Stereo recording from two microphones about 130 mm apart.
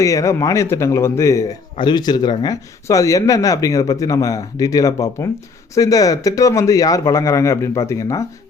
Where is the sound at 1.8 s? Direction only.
35° left (ahead or behind).